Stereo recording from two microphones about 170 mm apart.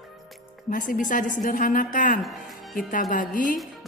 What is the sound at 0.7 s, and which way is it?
A woman's voice, 50° left (ahead or behind).